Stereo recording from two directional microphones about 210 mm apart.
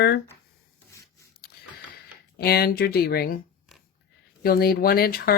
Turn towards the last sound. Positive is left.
turn(degrees=45)  # may be behind; listen again after turning